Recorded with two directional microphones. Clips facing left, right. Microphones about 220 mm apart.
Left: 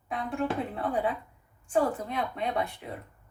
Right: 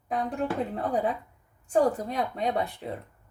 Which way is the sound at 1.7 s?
40° right (ahead or behind).